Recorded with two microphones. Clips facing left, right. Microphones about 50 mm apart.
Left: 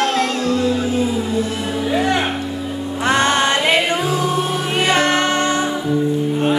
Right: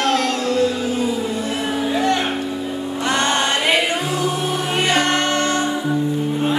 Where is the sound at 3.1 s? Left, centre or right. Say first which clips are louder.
Left 4 dB; centre.